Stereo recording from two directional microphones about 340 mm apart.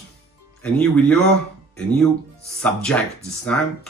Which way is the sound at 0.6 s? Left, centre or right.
Centre.